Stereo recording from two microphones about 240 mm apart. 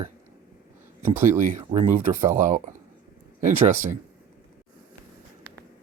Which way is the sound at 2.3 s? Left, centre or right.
Right.